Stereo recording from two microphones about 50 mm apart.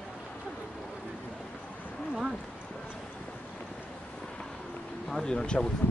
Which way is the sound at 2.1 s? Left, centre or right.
Centre.